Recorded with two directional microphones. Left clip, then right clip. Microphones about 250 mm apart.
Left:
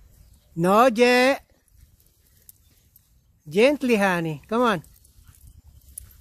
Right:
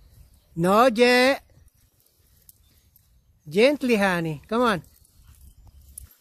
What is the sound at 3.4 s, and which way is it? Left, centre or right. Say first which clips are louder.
Speech: even; centre.